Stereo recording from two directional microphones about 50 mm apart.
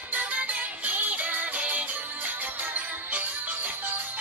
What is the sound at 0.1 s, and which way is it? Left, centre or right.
Music, right.